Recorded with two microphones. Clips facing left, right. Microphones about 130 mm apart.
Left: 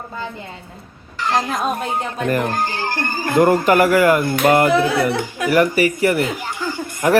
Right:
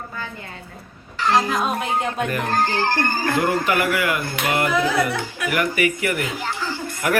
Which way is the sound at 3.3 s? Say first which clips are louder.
Left 9 dB; 45° left (ahead or behind).